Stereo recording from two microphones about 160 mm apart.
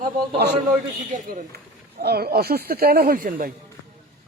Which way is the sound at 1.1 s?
60° right (ahead or behind).